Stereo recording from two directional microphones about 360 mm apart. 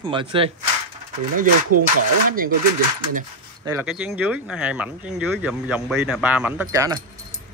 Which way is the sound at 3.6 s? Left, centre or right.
Centre.